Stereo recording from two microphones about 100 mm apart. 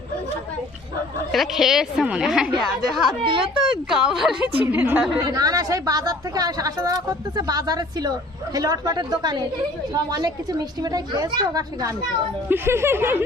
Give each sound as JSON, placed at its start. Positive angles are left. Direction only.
{"t": 1.3, "sound": "a woman's voice", "side_deg": 0}
{"t": 4.6, "sound": "a woman's voice", "side_deg": -20}
{"t": 5.3, "sound": "speech", "side_deg": -40}
{"t": 12.5, "sound": "speech", "side_deg": -25}